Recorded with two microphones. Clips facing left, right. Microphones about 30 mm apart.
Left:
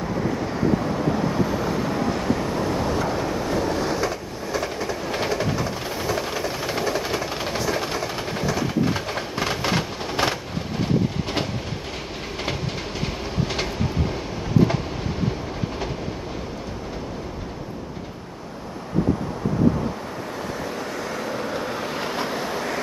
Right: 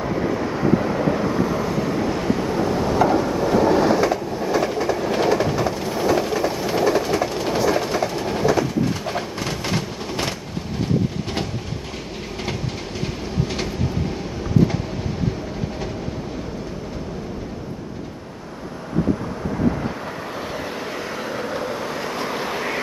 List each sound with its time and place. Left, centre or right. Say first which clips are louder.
0.0 s vehicle: right 3 dB; centre
1.3 s waves: right 2 dB; centre
7.4 s train: right 5 dB; centre
9.4 s vehicle: left 1 dB; centre
20.5 s vehicle: right 1 dB; centre
22.3 s vehicle: right 2 dB; centre